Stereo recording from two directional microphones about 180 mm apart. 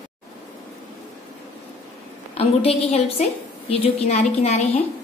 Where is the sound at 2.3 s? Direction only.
35° left (ahead or behind).